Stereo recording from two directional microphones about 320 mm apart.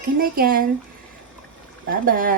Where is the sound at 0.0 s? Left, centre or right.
Right.